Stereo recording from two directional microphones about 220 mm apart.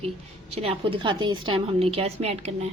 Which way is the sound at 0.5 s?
25° right (ahead or behind).